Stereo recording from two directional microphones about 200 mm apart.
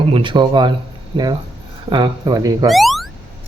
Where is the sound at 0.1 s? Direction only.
25° right (ahead or behind).